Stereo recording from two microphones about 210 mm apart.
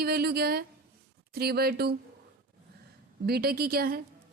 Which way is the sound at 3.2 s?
50° right (ahead or behind).